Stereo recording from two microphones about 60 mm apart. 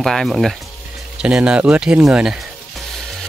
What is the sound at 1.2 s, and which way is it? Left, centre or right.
Speech, centre.